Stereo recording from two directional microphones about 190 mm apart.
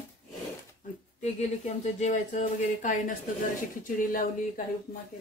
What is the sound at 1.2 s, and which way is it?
Speech, 35° left (ahead or behind).